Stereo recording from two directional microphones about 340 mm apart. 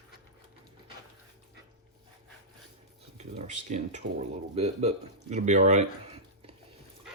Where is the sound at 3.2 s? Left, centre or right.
Centre.